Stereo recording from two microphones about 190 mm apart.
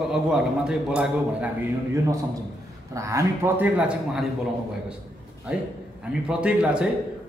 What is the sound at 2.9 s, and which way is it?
A man's voice, 15° right (ahead or behind).